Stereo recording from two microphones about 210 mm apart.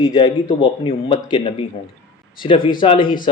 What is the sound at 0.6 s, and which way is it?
Speech, 25° left (ahead or behind).